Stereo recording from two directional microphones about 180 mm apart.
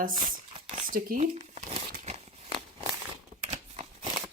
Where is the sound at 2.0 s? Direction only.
35° right (ahead or behind).